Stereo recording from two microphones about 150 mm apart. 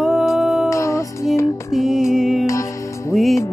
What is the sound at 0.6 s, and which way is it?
Music, 20° left (ahead or behind).